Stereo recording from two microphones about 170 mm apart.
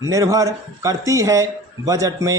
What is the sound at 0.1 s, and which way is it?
A man's voice, 20° right (ahead or behind).